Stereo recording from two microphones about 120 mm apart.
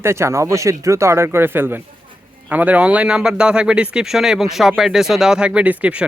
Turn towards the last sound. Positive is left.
turn(degrees=-10)  # may be behind; listen again after turning